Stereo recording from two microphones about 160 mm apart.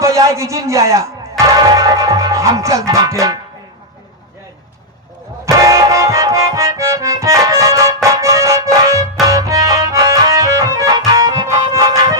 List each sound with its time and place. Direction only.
0.0 s speech: 20° right (ahead or behind)
5.5 s music: 20° right (ahead or behind)